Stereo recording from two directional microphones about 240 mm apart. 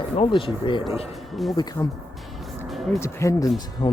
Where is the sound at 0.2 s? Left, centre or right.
Left.